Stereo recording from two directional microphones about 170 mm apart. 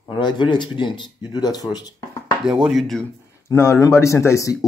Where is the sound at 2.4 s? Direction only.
5° right (ahead or behind).